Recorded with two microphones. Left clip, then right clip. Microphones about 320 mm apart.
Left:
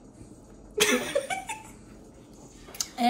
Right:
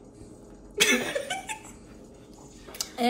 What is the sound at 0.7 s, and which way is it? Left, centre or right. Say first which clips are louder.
Laughter: right 1 dB; centre.